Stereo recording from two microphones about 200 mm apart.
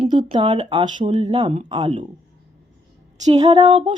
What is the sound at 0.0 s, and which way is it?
Speech, 25° right (ahead or behind).